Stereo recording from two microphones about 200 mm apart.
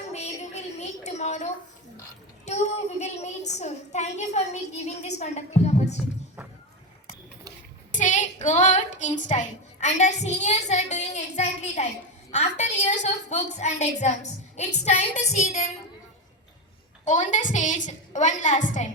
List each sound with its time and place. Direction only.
0.0 s a sound: 35° left (ahead or behind)
2.4 s a woman's voice: 35° left (ahead or behind)
7.9 s a woman's voice: 40° left (ahead or behind)
17.1 s a woman's voice: 40° left (ahead or behind)